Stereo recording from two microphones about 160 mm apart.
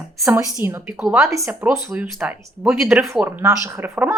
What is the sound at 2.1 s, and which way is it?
Speech, 5° right (ahead or behind).